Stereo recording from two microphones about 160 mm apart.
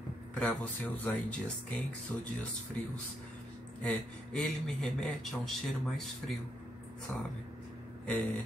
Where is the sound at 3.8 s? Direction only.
10° left (ahead or behind).